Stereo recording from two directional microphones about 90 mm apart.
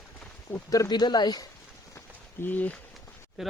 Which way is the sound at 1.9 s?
25° left (ahead or behind).